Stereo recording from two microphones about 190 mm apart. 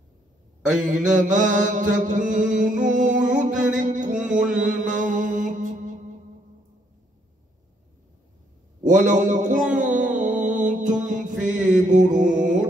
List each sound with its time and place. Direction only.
0.6 s a man's voice: 5° right (ahead or behind)
1.0 s mantra: 40° right (ahead or behind)
8.8 s a man's voice: 40° right (ahead or behind)
9.8 s music: 40° right (ahead or behind)
11.1 s mantra: 40° right (ahead or behind)